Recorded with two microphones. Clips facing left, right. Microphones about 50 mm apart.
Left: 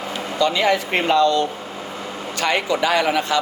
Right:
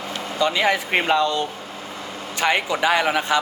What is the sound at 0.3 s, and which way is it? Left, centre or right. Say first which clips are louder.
A man's voice: left 2 dB; centre.